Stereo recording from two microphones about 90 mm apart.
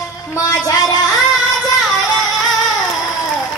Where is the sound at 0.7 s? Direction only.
40° left (ahead or behind).